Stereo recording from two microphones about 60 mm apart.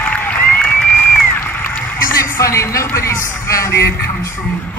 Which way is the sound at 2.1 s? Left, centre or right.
Left.